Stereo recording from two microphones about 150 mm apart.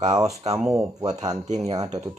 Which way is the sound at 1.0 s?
25° right (ahead or behind).